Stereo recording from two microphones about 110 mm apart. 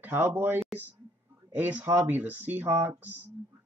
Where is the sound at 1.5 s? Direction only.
15° right (ahead or behind).